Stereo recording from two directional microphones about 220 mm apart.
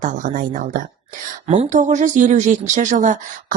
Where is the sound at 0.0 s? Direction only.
35° right (ahead or behind).